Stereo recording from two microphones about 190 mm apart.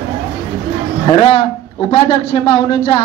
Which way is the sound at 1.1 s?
30° left (ahead or behind).